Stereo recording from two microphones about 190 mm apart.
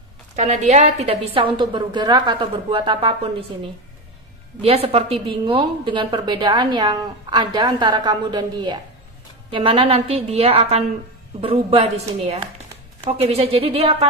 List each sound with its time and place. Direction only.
0.3 s a woman's voice: 40° right (ahead or behind)
4.6 s a woman's voice: 30° right (ahead or behind)